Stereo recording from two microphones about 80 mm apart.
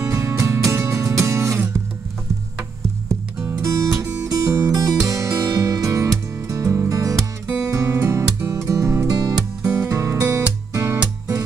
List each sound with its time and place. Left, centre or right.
0.0 s music: right
3.6 s music: right
4.3 s music: right
7.4 s music: centre
7.7 s music: right